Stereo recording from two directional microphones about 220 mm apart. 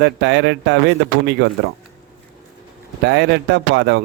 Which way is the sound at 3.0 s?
50° right (ahead or behind).